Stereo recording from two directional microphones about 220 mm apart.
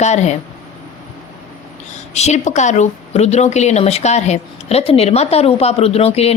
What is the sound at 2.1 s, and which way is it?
A woman's voice, 30° left (ahead or behind).